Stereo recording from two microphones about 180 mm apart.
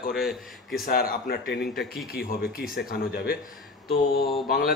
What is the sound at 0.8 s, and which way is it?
Speech, 55° left (ahead or behind).